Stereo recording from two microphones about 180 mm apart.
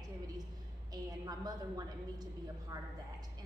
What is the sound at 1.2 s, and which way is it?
Speech, 20° right (ahead or behind).